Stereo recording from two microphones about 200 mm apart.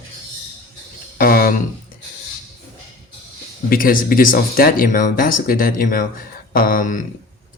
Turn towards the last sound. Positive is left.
turn(degrees=40)  # may be behind; listen again after turning